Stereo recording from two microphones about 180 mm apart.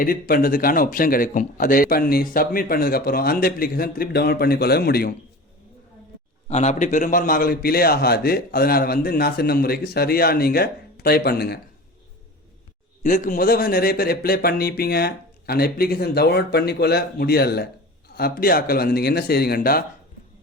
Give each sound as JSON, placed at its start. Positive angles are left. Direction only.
{"t": 0.0, "sound": "speech", "side_deg": 50}
{"t": 6.5, "sound": "speech", "side_deg": 40}
{"t": 13.0, "sound": "speech", "side_deg": 45}